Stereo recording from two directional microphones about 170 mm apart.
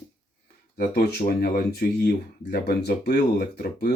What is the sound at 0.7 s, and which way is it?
Speech, 60° left (ahead or behind).